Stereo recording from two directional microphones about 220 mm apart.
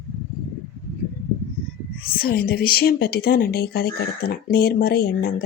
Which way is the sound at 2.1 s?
40° left (ahead or behind).